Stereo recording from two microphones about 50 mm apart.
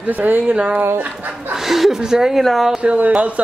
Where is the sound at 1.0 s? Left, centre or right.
Right.